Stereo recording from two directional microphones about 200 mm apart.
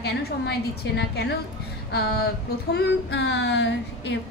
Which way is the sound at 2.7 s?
60° left (ahead or behind).